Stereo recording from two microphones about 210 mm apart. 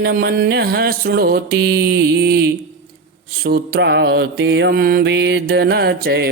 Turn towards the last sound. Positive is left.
turn(degrees=-50)  # may be behind; listen again after turning